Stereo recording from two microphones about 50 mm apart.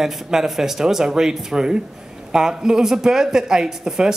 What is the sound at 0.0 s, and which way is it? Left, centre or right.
A man's voice, centre.